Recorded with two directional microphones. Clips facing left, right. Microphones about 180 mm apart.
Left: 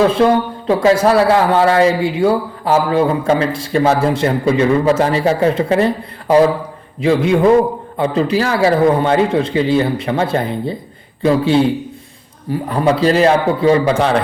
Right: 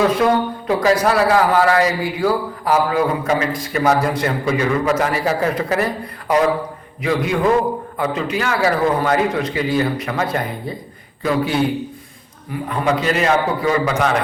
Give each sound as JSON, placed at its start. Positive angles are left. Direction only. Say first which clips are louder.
{"t": 0.7, "sound": "a man's voice", "louder": "left 4 dB", "side_deg": 25}